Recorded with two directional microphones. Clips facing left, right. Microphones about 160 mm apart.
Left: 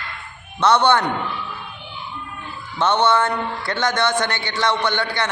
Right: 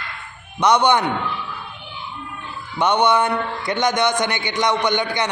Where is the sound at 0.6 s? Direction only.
15° right (ahead or behind).